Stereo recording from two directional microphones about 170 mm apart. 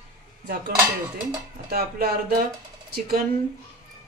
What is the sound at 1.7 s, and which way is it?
Speech, 65° right (ahead or behind).